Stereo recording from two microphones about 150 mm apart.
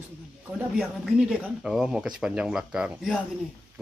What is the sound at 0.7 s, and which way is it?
Speech, 5° right (ahead or behind).